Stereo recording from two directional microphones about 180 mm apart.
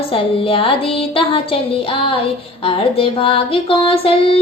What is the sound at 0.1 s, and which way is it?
Female singing, 30° left (ahead or behind).